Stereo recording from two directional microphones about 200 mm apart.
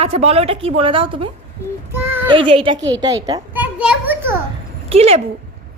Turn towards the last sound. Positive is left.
turn(degrees=-30)  # may be behind; listen again after turning